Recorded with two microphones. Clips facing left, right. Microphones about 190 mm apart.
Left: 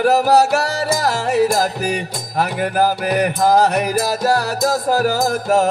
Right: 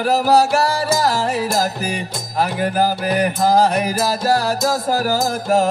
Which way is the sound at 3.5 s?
70° left (ahead or behind).